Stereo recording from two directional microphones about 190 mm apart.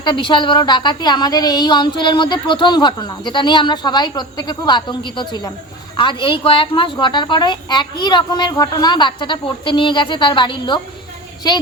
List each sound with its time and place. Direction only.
0.0 s a woman's voice: 25° left (ahead or behind)